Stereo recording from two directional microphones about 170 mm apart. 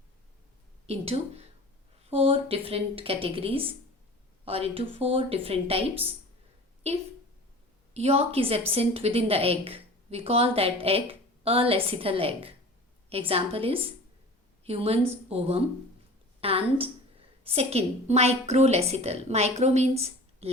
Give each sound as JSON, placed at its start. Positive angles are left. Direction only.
{"t": 0.9, "sound": "a woman's voice", "side_deg": -35}